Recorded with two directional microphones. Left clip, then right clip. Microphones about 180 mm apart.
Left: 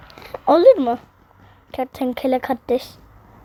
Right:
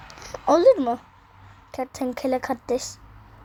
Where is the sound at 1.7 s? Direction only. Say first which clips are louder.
Left 5 dB; 35° left (ahead or behind).